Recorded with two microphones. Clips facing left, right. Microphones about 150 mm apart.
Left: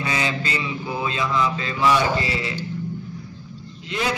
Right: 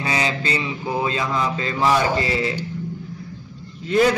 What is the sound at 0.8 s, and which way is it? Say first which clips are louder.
A man's voice: right 3 dB; 40° right (ahead or behind).